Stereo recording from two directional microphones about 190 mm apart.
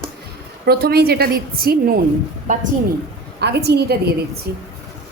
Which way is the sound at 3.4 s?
60° right (ahead or behind).